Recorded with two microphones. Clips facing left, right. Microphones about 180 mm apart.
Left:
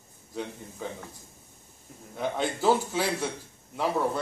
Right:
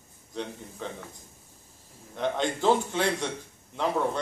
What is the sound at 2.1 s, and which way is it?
A man's voice, 5° left (ahead or behind).